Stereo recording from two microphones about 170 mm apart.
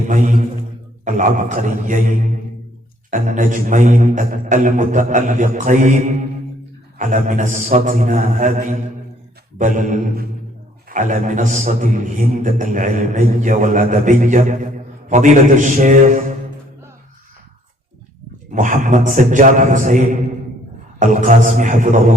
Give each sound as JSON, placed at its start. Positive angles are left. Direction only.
{"t": 0.1, "sound": "a man's voice", "side_deg": -50}
{"t": 18.5, "sound": "a man's voice", "side_deg": -50}